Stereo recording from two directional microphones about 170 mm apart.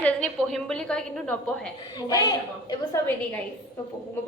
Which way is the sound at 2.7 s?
15° left (ahead or behind).